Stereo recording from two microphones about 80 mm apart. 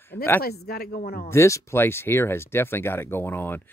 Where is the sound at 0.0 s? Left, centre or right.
Left.